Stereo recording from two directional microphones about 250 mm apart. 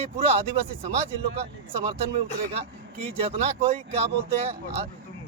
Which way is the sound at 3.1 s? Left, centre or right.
Right.